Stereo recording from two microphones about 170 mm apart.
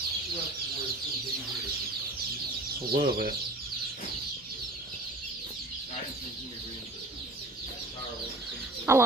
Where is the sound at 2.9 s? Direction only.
60° right (ahead or behind).